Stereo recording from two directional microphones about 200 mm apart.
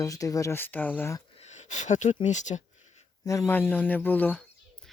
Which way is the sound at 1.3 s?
35° left (ahead or behind).